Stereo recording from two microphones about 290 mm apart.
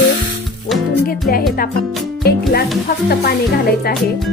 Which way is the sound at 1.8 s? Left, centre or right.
Centre.